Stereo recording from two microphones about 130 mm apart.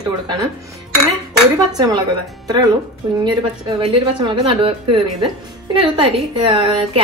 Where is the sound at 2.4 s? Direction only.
30° right (ahead or behind).